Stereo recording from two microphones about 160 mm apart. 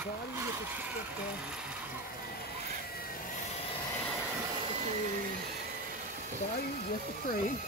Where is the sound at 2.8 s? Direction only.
70° left (ahead or behind).